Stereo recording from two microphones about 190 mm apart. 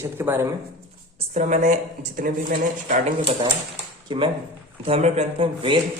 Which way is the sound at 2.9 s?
35° right (ahead or behind).